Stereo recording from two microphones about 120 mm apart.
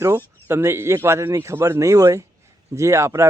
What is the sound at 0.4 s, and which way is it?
Speech, 20° right (ahead or behind).